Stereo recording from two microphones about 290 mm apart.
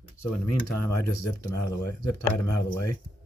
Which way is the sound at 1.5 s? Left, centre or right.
Left.